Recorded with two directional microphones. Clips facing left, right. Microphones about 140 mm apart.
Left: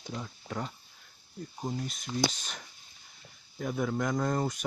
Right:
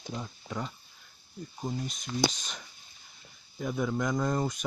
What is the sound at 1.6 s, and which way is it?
Speech, 10° left (ahead or behind).